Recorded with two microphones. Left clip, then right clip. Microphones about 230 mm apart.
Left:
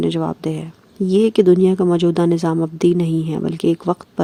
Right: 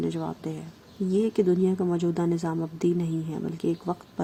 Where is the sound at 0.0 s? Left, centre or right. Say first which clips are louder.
Left 11 dB; left.